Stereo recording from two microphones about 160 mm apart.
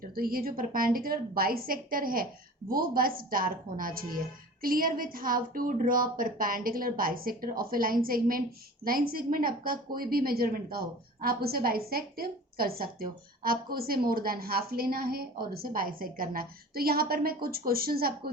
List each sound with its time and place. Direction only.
0.0 s a woman's voice: 65° right (ahead or behind)